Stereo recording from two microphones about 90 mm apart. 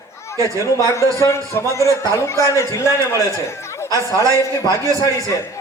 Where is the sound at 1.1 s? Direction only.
35° left (ahead or behind).